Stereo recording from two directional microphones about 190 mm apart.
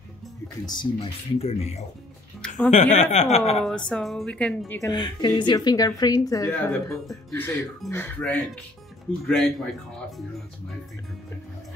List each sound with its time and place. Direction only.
0.7 s speech: 25° left (ahead or behind)
2.4 s music: 5° left (ahead or behind)
2.7 s speech: 40° left (ahead or behind)
3.9 s a woman's voice: centre (ahead or behind)
4.7 s speech: 20° left (ahead or behind)
6.7 s a woman's voice: 5° left (ahead or behind)